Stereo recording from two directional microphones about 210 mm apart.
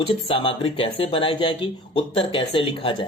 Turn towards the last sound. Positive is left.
turn(degrees=25)  # may be behind; listen again after turning